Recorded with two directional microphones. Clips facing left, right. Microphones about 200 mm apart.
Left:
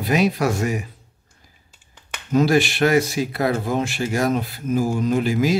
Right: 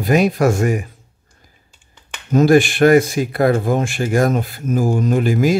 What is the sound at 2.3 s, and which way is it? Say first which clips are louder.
Speech: right 5 dB; 50° right (ahead or behind).